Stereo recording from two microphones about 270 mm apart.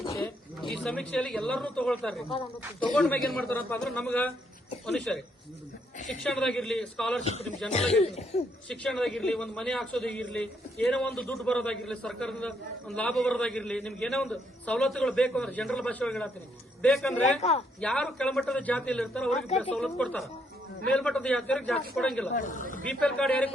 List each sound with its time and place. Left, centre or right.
0.0 s a sound: centre
0.7 s a man's voice: centre
6.2 s a man's voice: centre
7.2 s cough: left
8.7 s a man's voice: centre
22.4 s cough: left
22.9 s a man's voice: centre